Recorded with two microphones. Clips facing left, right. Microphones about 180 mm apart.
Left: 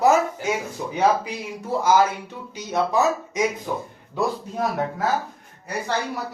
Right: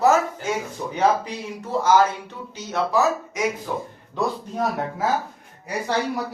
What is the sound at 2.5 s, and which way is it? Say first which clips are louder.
Speech: even; 15° left (ahead or behind).